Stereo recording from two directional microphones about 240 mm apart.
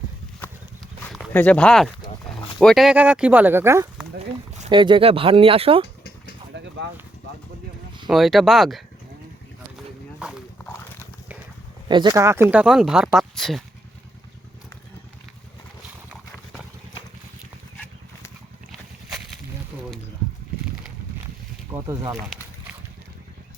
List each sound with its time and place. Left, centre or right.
1.1 s speech: centre
4.2 s speech: right
6.5 s a sound: right
8.0 s speech: centre
10.2 s horse: centre
11.9 s speech: centre
21.7 s speech: centre
22.3 s a sound: centre